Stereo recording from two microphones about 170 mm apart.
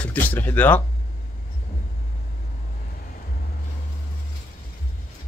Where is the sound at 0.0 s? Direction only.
10° left (ahead or behind).